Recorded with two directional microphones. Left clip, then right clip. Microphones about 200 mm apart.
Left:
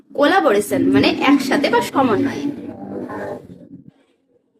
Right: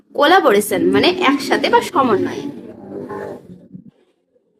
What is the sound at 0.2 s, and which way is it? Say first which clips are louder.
A woman's voice: right 3 dB; 25° right (ahead or behind).